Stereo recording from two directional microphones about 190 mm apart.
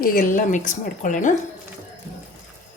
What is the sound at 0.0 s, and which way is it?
A woman's voice, 45° left (ahead or behind).